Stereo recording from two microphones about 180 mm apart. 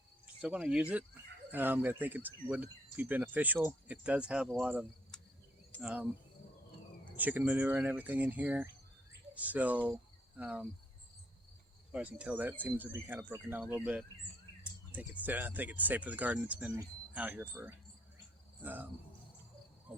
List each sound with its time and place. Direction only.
0.4 s speech: 5° right (ahead or behind)
7.2 s speech: 10° right (ahead or behind)
11.9 s speech: 5° right (ahead or behind)